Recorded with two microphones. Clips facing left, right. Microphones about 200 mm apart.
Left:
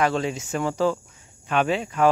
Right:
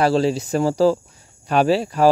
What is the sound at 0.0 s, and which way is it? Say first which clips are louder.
Speech: right 6 dB; 35° right (ahead or behind).